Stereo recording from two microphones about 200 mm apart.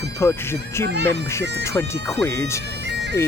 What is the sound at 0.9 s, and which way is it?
Speech, 60° right (ahead or behind).